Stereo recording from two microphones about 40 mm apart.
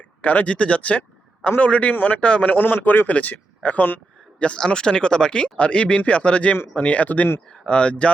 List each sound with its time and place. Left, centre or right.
0.2 s speech: left
0.4 s speech: left
1.9 s a man's voice: left
2.2 s speech: left
2.5 s speech: left
3.1 s speech: left
4.4 s speech: left
7.6 s speech: left